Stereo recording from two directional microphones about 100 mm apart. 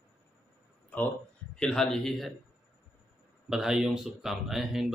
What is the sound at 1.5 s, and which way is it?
Speech, 5° left (ahead or behind).